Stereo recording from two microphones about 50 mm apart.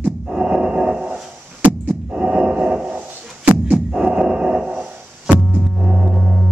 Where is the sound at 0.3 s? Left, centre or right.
Centre.